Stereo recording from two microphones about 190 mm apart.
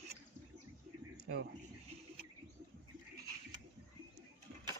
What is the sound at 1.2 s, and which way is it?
Speech, 55° right (ahead or behind).